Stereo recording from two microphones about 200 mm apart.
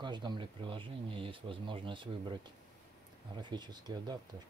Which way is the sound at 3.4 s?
20° right (ahead or behind).